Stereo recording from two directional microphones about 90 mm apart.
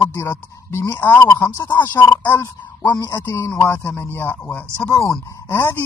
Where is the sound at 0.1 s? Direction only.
30° left (ahead or behind).